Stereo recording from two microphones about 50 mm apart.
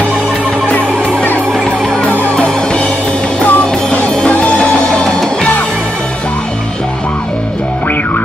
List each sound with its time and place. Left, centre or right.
0.7 s music: left
2.3 s music: centre
3.4 s music: left
4.1 s music: left